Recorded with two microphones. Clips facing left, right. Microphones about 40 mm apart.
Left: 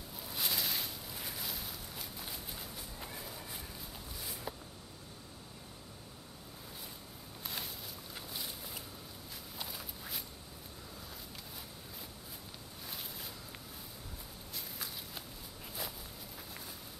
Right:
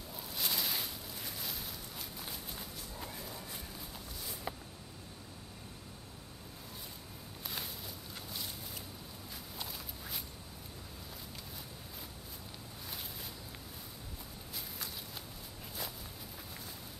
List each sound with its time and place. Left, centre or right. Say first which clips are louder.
0.3 s a sound: even; centre
1.2 s walk: left 1 dB; centre
7.4 s a sound: even; centre
9.3 s walk: even; centre
12.8 s boat: even; centre
14.5 s walk: even; centre